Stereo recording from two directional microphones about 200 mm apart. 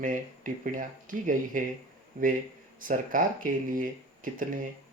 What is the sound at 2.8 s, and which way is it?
Speech, 40° right (ahead or behind).